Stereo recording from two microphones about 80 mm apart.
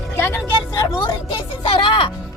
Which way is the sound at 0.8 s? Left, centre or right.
Left.